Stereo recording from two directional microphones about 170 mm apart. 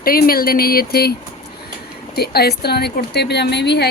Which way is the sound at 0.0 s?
60° left (ahead or behind).